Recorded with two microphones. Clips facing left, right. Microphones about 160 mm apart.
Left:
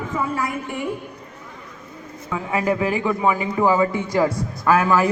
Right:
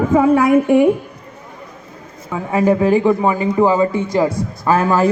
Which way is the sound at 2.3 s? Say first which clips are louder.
Right 6 dB; 30° right (ahead or behind).